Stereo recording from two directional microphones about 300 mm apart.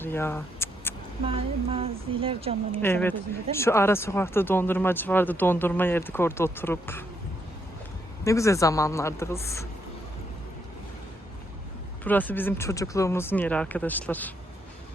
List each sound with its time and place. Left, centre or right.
0.0 s speech: centre
1.3 s speech: centre
2.8 s speech: centre
8.2 s speech: centre
12.0 s speech: centre